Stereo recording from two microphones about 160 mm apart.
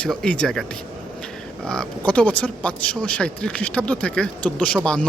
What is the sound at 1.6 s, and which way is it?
Speech, 5° left (ahead or behind).